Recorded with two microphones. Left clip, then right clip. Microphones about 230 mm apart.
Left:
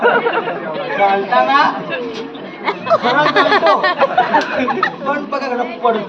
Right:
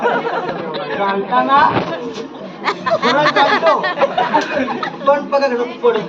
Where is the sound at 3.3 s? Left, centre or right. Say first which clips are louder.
Left 1 dB; left.